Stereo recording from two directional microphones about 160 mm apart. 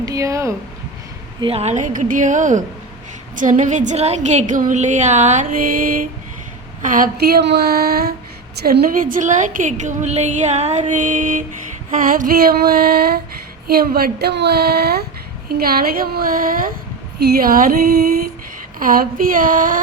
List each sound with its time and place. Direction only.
0.0 s speech: 20° right (ahead or behind)
1.4 s a woman's voice: 35° right (ahead or behind); by 15.0 s 80° right
15.4 s a woman's voice: 70° right (ahead or behind)
17.2 s a woman's voice: 80° right
18.8 s a woman's voice: 60° right (ahead or behind)